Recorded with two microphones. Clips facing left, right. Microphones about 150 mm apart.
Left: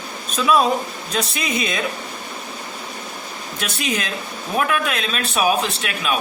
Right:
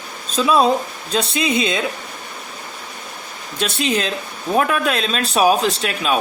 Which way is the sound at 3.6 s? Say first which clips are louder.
Right 5 dB; 30° right (ahead or behind).